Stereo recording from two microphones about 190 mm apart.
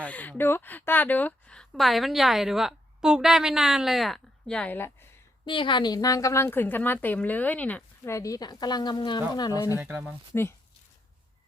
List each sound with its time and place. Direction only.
0.0 s a woman's voice: 10° left (ahead or behind)
5.5 s speech: 25° left (ahead or behind)
9.7 s speech: 10° right (ahead or behind)